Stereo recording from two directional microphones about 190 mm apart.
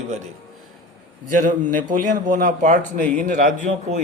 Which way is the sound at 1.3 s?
45° right (ahead or behind).